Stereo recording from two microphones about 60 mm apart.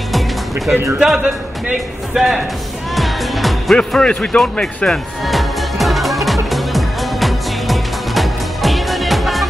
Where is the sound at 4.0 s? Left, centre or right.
Centre.